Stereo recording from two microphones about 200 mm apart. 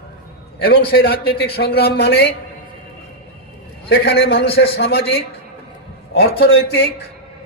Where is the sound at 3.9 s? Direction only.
55° left (ahead or behind).